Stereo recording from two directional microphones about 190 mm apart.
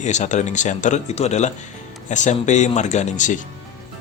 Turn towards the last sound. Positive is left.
turn(degrees=40)  # may be behind; listen again after turning